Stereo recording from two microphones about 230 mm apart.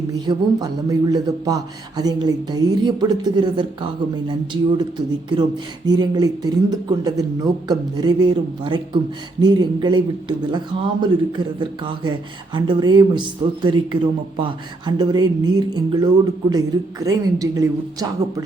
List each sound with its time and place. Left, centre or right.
0.1 s speech: centre